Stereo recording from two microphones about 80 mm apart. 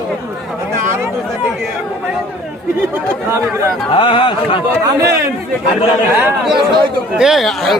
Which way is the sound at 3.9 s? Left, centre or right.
Left.